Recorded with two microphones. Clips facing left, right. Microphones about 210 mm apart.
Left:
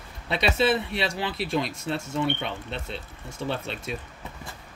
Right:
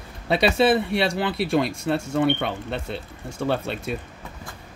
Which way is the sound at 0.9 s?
60° right (ahead or behind).